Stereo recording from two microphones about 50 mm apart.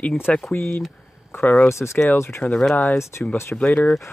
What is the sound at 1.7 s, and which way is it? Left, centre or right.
Speech, left.